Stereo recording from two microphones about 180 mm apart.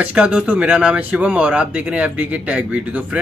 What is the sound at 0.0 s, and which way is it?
A man's voice, 10° right (ahead or behind).